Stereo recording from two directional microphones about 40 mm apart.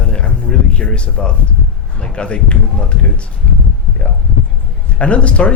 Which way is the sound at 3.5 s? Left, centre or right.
Left.